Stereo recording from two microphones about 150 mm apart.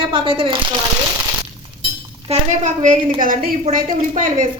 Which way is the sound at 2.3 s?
55° right (ahead or behind).